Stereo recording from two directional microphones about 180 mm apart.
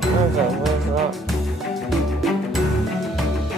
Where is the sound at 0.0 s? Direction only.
Centre (ahead or behind).